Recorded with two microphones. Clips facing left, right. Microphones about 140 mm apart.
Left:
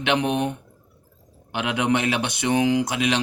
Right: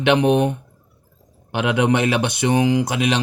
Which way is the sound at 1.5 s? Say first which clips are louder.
Right 4 dB; 40° right (ahead or behind).